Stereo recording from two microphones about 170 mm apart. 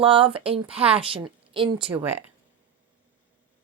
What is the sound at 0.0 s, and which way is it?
A woman's voice, 30° right (ahead or behind).